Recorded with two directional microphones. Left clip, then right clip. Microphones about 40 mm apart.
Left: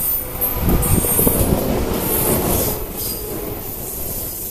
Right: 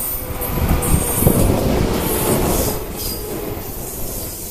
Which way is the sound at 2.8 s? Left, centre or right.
Centre.